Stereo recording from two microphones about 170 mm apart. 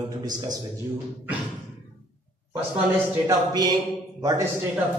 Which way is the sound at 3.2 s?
20° right (ahead or behind).